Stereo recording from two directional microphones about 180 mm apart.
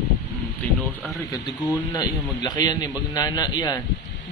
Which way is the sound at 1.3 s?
20° left (ahead or behind).